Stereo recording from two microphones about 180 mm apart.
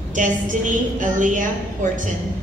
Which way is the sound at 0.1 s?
45° right (ahead or behind).